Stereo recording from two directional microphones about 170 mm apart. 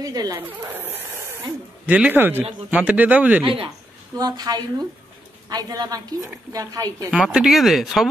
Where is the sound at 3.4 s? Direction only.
30° right (ahead or behind).